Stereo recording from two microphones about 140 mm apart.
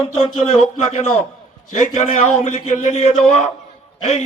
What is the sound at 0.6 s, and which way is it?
Speech, 50° left (ahead or behind).